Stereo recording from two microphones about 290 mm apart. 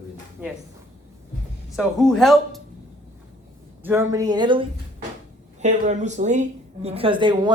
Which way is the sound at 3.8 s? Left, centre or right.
Centre.